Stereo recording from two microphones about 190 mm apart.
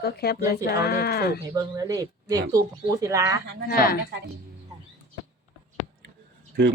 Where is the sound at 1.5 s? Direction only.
15° right (ahead or behind).